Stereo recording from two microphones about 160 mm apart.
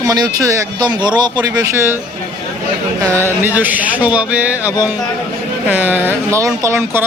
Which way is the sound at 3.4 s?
10° right (ahead or behind).